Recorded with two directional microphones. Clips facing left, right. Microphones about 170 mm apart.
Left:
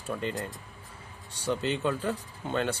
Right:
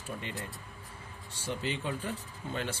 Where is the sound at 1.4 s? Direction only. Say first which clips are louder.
Left 6 dB; 80° left.